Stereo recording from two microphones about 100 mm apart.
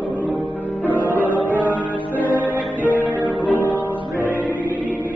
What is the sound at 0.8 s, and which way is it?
Music, 15° left (ahead or behind).